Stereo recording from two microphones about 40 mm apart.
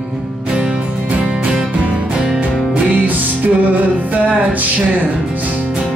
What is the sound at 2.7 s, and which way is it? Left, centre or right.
Music, right.